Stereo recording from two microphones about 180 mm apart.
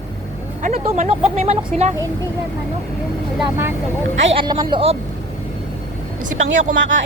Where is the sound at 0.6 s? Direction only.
40° right (ahead or behind).